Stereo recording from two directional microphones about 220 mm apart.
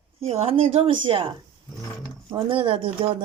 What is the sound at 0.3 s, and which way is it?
Speech, 25° right (ahead or behind).